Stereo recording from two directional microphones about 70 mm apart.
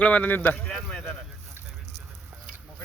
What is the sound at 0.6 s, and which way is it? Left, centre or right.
Speech, centre.